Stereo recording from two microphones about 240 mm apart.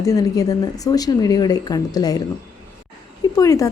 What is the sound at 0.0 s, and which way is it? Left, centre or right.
A woman's voice, centre.